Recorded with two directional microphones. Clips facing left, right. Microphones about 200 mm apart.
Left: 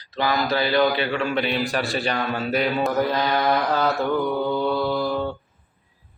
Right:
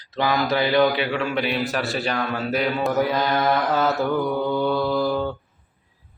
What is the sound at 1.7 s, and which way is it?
Mantra, centre (ahead or behind).